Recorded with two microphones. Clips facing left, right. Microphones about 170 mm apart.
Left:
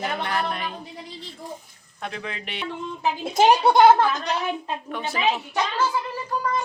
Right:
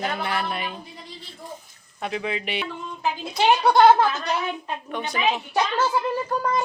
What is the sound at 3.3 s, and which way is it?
Speech, 45° left (ahead or behind).